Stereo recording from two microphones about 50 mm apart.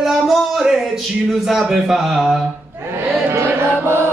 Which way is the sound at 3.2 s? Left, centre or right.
Right.